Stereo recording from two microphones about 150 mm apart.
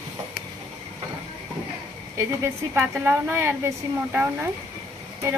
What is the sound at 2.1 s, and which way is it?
A woman's voice, 15° right (ahead or behind).